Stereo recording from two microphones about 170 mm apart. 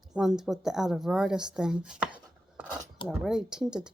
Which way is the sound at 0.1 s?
5° right (ahead or behind).